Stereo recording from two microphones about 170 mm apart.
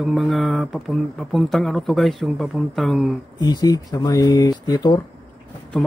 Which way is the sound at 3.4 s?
25° left (ahead or behind).